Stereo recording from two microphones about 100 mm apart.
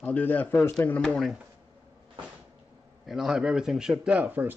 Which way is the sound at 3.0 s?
Centre (ahead or behind).